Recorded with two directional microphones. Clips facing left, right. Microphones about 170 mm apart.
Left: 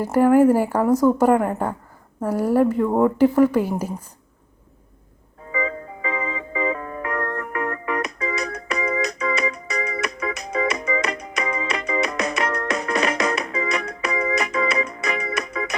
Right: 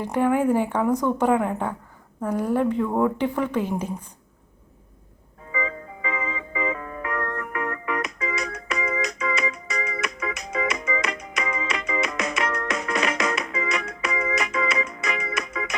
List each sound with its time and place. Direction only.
0.0 s a woman's voice: 5° left (ahead or behind)
5.5 s music: 40° left (ahead or behind)